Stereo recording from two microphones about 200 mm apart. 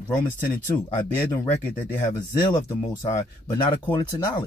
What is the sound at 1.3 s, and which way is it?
Speech, 10° left (ahead or behind).